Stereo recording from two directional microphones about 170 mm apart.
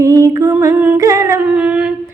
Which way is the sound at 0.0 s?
20° right (ahead or behind).